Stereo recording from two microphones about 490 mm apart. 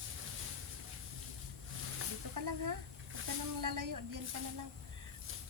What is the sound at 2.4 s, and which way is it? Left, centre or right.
Speech, right.